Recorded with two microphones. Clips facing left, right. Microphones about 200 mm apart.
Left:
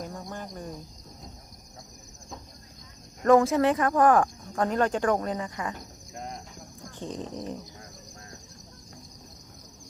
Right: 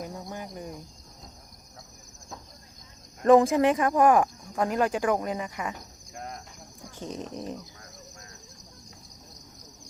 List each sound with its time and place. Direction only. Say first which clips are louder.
0.0 s cricket: even; 10° right (ahead or behind)
3.2 s speech: right 1 dB; 15° right (ahead or behind)
6.1 s cricket: left 1 dB; centre (ahead or behind)
7.2 s speech: even; 20° left (ahead or behind)